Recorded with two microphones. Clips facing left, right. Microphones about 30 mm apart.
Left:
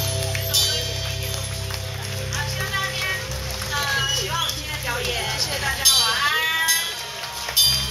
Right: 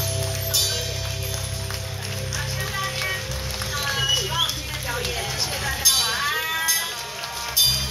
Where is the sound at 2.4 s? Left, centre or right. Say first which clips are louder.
Left 3 dB; centre.